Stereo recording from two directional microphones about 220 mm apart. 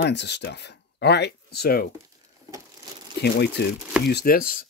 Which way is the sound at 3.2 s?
50° left (ahead or behind).